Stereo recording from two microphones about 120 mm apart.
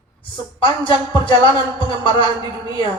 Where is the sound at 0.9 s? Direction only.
40° left (ahead or behind).